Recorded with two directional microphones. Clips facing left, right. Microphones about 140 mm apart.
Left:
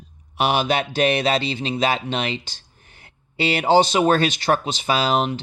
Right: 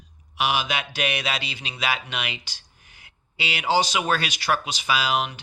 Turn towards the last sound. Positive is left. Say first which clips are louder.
# left 5 dB
turn(degrees=25)  # may be behind; listen again after turning